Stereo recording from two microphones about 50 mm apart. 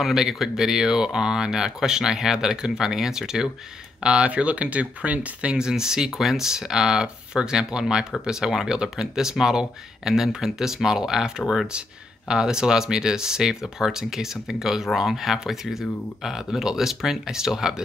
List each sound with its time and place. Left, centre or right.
0.0 s speech: centre; by 5.6 s right
5.6 s speech: centre